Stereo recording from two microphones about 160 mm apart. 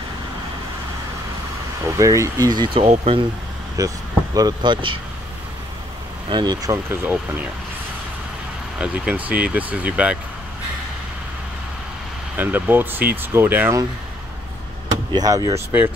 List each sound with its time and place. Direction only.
1.9 s speech: 20° right (ahead or behind); by 3.3 s 35° right (ahead or behind)
3.7 s speech: 20° right (ahead or behind)
6.3 s speech: 25° right (ahead or behind)
8.7 s speech: 5° right (ahead or behind)
12.4 s speech: 10° right (ahead or behind)
15.1 s speech: 20° right (ahead or behind)